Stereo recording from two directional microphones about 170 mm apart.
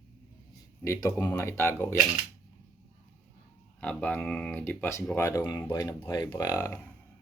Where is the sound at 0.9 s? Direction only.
20° left (ahead or behind).